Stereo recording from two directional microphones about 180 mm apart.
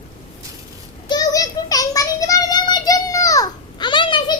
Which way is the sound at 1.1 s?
20° left (ahead or behind).